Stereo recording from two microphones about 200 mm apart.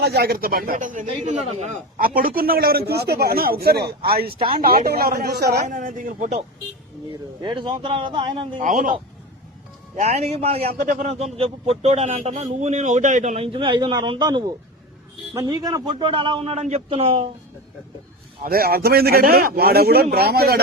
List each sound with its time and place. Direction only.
0.0 s a man's voice: 50° right (ahead or behind)
4.3 s a man's voice: 30° right (ahead or behind)
4.6 s a man's voice: 50° right (ahead or behind)
5.6 s a man's voice: 40° right (ahead or behind)
7.1 s a man's voice: 25° right (ahead or behind)
8.6 s a man's voice: 40° right (ahead or behind)
18.4 s a man's voice: 50° right (ahead or behind)